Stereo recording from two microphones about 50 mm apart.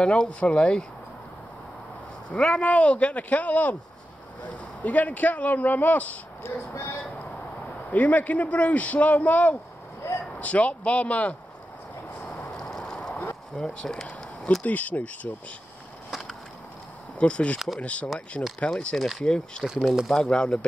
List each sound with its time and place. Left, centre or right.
0.0 s speech: left
2.3 s speech: left
4.8 s speech: left
6.7 s speech: left
7.9 s speech: left
10.0 s a sound: left
10.4 s speech: left
12.4 s vehicle: centre
13.6 s speech: centre
14.6 s speech: left
16.1 s a sound: centre
17.2 s speech: left
19.6 s speech: centre
20.2 s speech: centre